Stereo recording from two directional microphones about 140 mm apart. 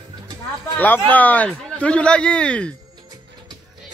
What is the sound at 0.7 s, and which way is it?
Speech, 10° left (ahead or behind).